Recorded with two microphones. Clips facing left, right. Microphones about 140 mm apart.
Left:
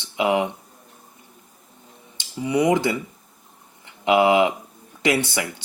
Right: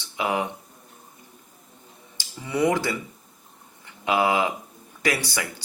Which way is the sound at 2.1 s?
20° left (ahead or behind).